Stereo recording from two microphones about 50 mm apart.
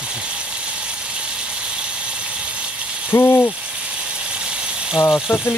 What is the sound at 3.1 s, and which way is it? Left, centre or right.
Hoot, left.